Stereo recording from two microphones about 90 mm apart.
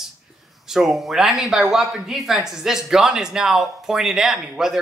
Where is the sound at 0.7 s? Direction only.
5° right (ahead or behind).